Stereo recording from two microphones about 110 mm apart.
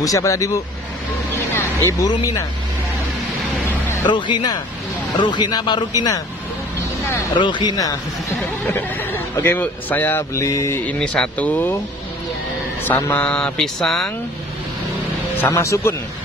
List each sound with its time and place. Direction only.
0.0 s speech: 30° left (ahead or behind)
1.6 s music: 25° left (ahead or behind)
2.0 s speech: 30° left (ahead or behind)
4.1 s speech: 45° left (ahead or behind)
7.3 s speech: 45° left (ahead or behind)
8.6 s speech: 20° left (ahead or behind)
10.3 s speech: 30° left (ahead or behind)
10.9 s speech: 10° left (ahead or behind)
12.8 s speech: 15° left (ahead or behind)
15.4 s speech: 30° left (ahead or behind)